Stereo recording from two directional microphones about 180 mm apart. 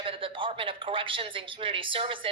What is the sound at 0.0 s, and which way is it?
Speech, 30° right (ahead or behind).